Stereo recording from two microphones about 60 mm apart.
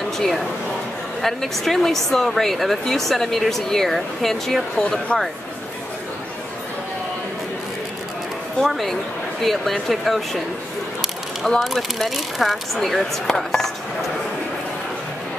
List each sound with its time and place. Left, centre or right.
0.2 s speech: centre
8.5 s speech: centre
11.6 s speech: centre